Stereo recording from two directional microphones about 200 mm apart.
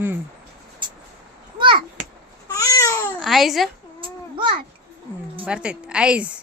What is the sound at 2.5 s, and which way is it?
Babbling, 15° left (ahead or behind).